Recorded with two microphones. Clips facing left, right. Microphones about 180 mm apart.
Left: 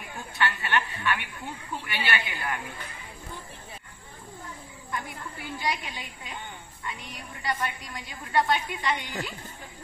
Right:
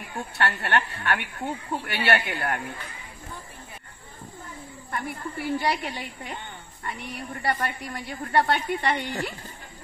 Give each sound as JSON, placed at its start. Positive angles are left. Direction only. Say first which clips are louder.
{"t": 0.2, "sound": "a woman's voice", "louder": "right 2 dB", "side_deg": -65}
{"t": 4.9, "sound": "a woman's voice", "louder": "right 4 dB", "side_deg": -60}